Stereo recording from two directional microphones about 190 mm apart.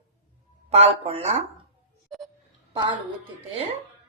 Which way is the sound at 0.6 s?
30° right (ahead or behind).